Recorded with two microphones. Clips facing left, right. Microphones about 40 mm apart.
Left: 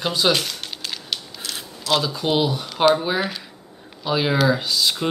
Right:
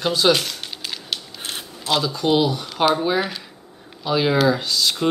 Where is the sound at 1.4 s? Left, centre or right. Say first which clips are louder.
Right 1 dB; right.